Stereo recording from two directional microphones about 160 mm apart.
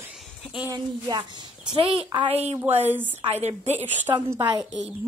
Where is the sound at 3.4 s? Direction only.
45° right (ahead or behind).